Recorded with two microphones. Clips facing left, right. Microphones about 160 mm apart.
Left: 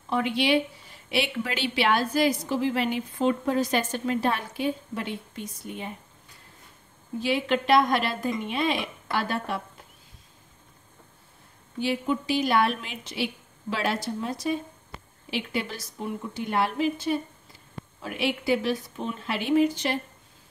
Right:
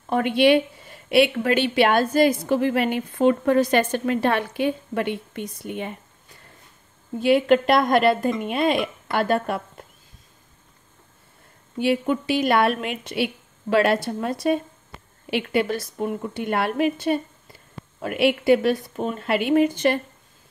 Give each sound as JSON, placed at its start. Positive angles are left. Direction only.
{"t": 0.1, "sound": "a woman's voice", "side_deg": -55}
{"t": 7.2, "sound": "a woman's voice", "side_deg": -55}
{"t": 11.8, "sound": "a woman's voice", "side_deg": -65}